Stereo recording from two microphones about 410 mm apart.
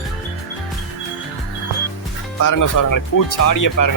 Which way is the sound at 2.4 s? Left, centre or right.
Left.